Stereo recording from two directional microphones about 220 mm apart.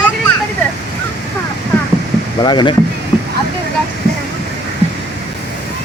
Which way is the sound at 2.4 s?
20° left (ahead or behind).